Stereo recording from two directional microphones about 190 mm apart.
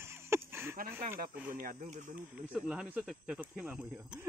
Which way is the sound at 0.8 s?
45° right (ahead or behind).